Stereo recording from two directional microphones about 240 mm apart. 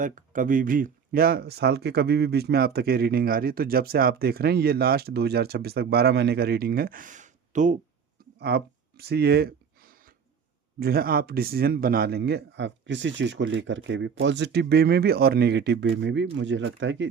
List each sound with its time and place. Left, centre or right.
0.0 s speech: right
8.4 s a sound: right
10.8 s speech: right